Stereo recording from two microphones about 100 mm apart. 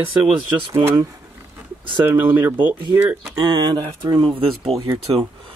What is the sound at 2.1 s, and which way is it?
Speech, 20° right (ahead or behind).